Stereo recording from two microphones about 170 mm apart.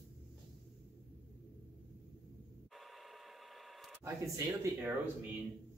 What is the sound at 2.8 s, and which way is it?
Printer, centre (ahead or behind).